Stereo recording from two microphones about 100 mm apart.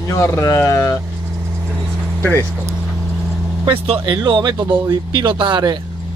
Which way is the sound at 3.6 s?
55° right (ahead or behind).